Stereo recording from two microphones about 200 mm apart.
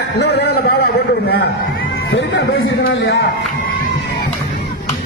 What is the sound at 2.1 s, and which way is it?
Speech, 60° left (ahead or behind).